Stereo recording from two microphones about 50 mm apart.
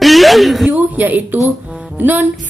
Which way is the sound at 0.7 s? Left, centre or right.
Right.